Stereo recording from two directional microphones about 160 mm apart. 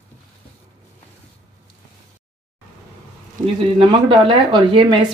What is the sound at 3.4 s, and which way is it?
Speech, 30° right (ahead or behind).